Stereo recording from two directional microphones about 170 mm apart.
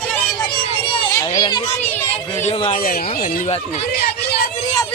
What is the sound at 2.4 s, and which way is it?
Speech, 35° left (ahead or behind).